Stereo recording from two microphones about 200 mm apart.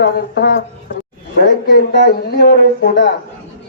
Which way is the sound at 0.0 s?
60° left (ahead or behind).